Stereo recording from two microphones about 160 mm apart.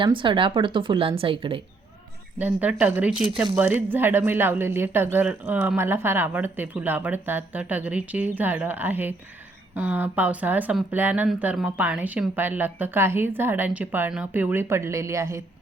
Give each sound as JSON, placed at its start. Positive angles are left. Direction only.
{"t": 0.0, "sound": "speech", "side_deg": -30}
{"t": 2.4, "sound": "speech", "side_deg": -10}